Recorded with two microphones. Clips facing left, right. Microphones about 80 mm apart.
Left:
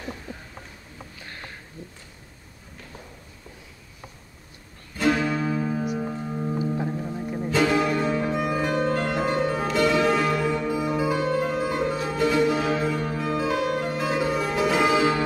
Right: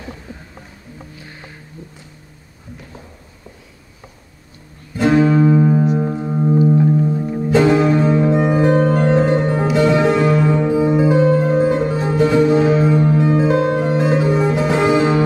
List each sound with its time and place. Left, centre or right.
0.3 s a sound: centre
4.9 s music: right
6.1 s singing bowl: right
6.9 s music: centre